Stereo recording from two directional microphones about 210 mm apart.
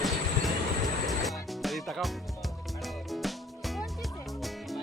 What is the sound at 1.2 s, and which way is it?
Music, centre (ahead or behind).